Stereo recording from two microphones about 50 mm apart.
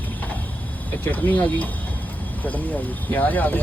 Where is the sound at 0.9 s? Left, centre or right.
Left.